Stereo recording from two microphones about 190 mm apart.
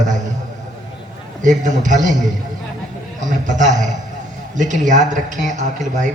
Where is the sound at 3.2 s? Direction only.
40° right (ahead or behind).